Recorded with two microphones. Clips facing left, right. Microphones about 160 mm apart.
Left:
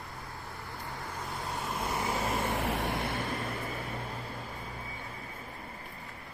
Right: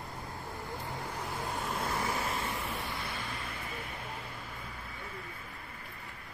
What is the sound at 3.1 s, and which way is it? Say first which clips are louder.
Vehicle: left 6 dB; 45° left (ahead or behind).